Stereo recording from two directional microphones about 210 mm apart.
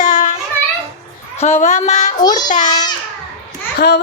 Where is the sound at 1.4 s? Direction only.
30° left (ahead or behind).